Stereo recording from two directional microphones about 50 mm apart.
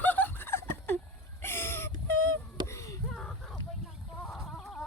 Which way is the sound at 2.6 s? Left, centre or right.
Left.